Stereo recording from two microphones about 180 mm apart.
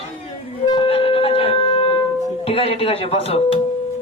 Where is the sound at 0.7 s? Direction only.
30° left (ahead or behind).